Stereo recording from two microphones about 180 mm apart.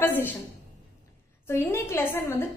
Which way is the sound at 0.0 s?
10° left (ahead or behind).